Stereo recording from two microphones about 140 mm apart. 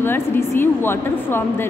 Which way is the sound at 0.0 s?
15° left (ahead or behind).